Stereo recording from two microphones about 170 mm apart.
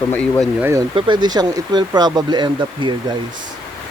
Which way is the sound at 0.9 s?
25° right (ahead or behind).